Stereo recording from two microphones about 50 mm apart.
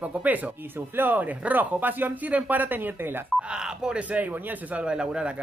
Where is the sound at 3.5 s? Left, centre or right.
Centre.